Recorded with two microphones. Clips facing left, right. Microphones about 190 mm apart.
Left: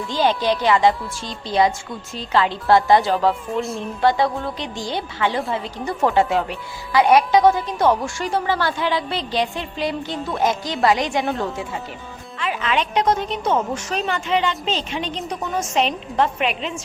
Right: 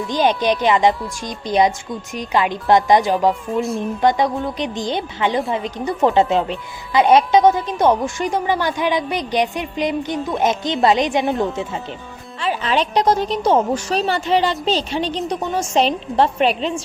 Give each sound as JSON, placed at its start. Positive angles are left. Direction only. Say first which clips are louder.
{"t": 0.1, "sound": "speech", "louder": "right 2 dB", "side_deg": -20}
{"t": 3.5, "sound": "a woman's voice", "louder": "right 3 dB", "side_deg": 0}
{"t": 3.8, "sound": "a woman's voice", "louder": "right 1 dB", "side_deg": -15}
{"t": 12.4, "sound": "a woman's voice", "louder": "right 3 dB", "side_deg": -35}